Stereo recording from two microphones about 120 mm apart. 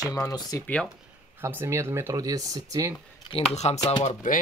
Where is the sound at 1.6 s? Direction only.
20° right (ahead or behind).